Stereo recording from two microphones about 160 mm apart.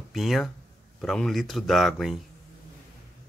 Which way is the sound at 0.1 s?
Centre (ahead or behind).